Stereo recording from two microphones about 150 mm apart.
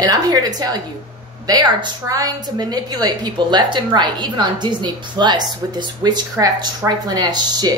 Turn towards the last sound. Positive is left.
turn(degrees=-25)  # may be behind; listen again after turning